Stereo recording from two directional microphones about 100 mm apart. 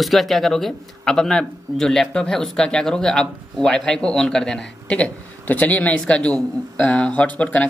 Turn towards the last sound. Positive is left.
turn(degrees=15)  # may be behind; listen again after turning